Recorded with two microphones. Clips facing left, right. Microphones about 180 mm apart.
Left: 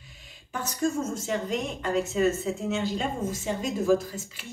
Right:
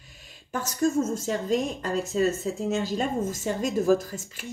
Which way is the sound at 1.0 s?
35° right (ahead or behind).